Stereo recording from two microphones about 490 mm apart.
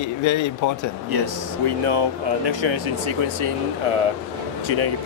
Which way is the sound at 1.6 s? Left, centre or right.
Right.